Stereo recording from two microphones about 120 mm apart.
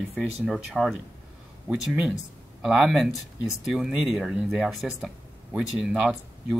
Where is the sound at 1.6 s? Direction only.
10° right (ahead or behind).